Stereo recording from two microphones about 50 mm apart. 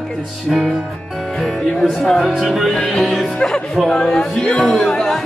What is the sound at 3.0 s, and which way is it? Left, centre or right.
Music, centre.